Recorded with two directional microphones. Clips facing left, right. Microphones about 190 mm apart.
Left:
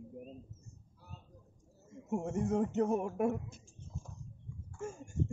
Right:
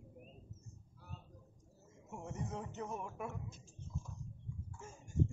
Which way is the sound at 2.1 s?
50° left (ahead or behind).